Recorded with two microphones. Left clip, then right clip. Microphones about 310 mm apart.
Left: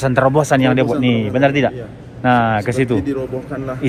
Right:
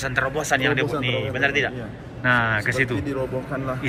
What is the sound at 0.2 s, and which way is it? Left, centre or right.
A man's voice, centre.